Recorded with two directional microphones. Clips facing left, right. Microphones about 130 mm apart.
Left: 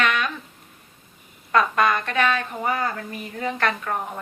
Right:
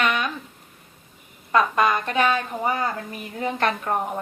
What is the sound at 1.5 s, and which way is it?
A woman's voice, 10° right (ahead or behind).